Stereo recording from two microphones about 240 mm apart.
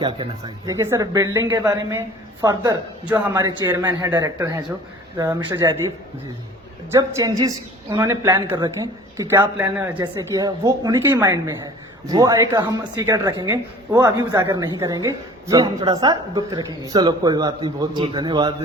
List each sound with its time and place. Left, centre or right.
0.0 s speech: centre
6.9 s speech: centre